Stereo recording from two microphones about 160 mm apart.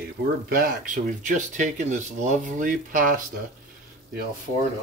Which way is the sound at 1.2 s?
50° right (ahead or behind).